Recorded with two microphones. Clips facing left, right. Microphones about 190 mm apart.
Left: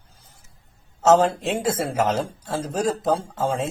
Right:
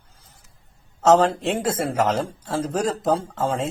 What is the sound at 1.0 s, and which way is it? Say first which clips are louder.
Speech: right 1 dB; 10° left (ahead or behind).